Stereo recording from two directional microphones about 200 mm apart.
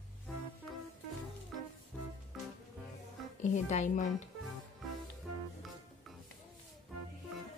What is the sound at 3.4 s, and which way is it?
Speech, 35° left (ahead or behind).